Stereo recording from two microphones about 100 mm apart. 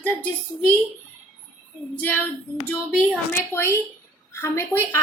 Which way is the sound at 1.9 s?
15° left (ahead or behind).